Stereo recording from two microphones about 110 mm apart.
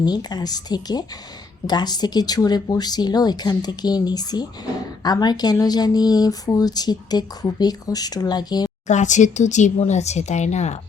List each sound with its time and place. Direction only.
0.0 s speech: 40° left (ahead or behind)
8.9 s speech: 90° left